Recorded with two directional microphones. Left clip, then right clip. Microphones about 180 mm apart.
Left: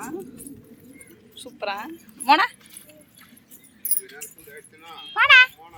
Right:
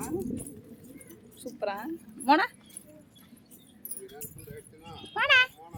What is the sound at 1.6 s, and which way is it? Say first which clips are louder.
Speech: left 4 dB; 25° right (ahead or behind).